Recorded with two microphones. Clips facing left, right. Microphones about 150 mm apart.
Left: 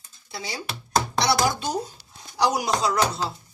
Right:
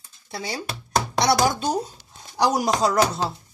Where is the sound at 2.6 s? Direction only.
45° right (ahead or behind).